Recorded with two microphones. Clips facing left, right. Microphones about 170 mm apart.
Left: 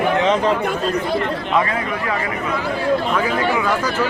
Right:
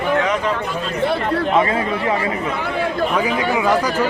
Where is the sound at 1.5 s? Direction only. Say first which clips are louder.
Left 1 dB; 25° right (ahead or behind).